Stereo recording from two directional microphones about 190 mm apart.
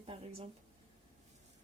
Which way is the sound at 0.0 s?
30° right (ahead or behind).